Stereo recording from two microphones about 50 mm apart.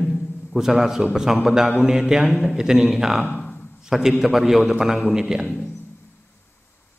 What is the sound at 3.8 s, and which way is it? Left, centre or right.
A man's voice, centre.